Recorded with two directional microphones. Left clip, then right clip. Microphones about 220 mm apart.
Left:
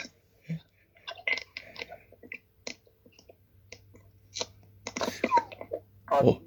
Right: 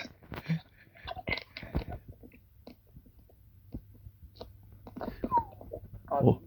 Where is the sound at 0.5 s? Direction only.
5° right (ahead or behind).